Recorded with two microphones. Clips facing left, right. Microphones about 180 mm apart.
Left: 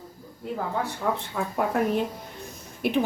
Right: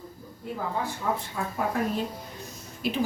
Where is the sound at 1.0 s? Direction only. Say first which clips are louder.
Left 2 dB; 65° left (ahead or behind).